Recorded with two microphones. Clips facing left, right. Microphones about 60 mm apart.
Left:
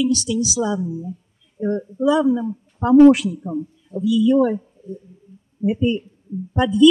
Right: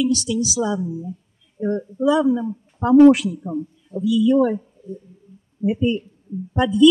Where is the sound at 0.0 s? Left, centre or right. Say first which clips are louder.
Left 1 dB; centre.